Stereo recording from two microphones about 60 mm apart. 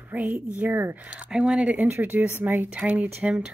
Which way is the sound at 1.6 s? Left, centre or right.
Right.